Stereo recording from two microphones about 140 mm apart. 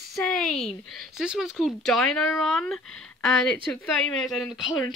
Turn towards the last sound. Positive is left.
turn(degrees=0)  # may be behind; listen again after turning